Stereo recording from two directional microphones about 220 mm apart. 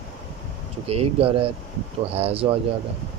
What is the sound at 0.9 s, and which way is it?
Speech, 25° right (ahead or behind).